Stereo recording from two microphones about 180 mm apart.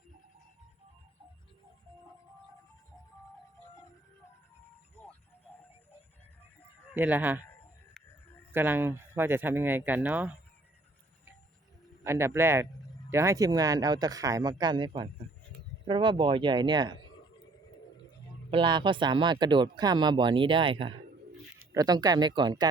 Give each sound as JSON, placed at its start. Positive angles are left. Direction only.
{"t": 5.0, "sound": "a sound", "side_deg": 10}
{"t": 6.9, "sound": "speech", "side_deg": -10}
{"t": 8.5, "sound": "speech", "side_deg": -10}
{"t": 12.0, "sound": "speech", "side_deg": -15}
{"t": 18.5, "sound": "speech", "side_deg": -25}